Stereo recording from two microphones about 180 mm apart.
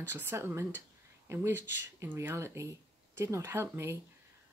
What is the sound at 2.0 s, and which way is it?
Speech, 15° right (ahead or behind).